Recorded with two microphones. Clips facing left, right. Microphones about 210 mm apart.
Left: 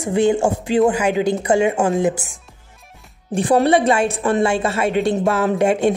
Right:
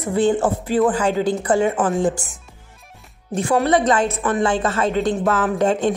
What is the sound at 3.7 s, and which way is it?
A woman's voice, 10° left (ahead or behind).